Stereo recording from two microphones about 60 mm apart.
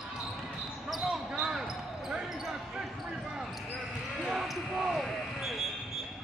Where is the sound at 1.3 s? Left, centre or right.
Centre.